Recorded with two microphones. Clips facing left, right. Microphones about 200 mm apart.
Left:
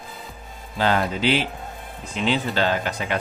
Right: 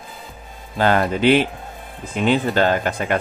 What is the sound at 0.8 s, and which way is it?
Speech, 55° right (ahead or behind).